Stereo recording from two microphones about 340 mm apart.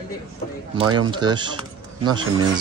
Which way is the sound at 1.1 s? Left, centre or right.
Centre.